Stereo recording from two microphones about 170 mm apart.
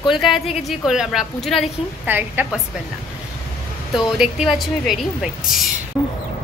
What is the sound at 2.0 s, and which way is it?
Speech, 10° right (ahead or behind).